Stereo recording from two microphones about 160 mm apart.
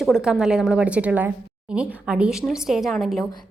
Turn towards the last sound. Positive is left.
turn(degrees=0)  # may be behind; listen again after turning